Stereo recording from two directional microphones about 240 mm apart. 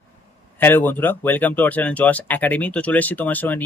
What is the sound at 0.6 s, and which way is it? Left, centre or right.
Speech, centre.